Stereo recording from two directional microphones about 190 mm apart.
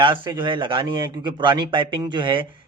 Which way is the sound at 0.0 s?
25° right (ahead or behind).